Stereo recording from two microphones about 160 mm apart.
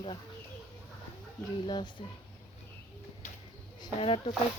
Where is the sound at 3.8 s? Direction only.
35° left (ahead or behind).